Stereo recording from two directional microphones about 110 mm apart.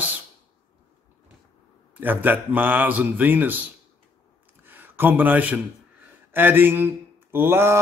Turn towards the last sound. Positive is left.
turn(degrees=-20)  # may be behind; listen again after turning